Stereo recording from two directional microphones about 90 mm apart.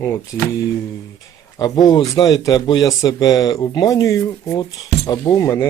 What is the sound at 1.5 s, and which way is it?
Speech, 45° left (ahead or behind).